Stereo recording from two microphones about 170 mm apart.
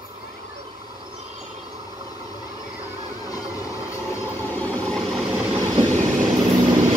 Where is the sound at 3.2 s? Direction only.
20° left (ahead or behind).